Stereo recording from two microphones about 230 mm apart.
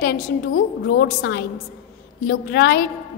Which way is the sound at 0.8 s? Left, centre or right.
Left.